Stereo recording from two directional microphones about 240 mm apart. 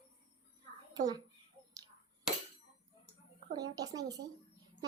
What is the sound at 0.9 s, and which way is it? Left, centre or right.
Speech, centre.